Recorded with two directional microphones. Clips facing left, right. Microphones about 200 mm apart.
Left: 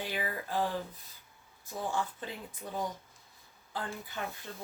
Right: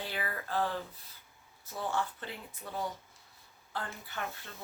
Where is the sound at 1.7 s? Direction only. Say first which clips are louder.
Even; 15° left (ahead or behind).